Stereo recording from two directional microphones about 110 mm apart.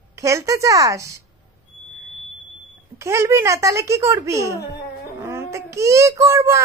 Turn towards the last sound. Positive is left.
turn(degrees=-25)  # may be behind; listen again after turning